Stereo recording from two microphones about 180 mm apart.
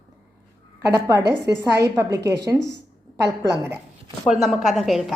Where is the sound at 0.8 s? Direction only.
15° right (ahead or behind).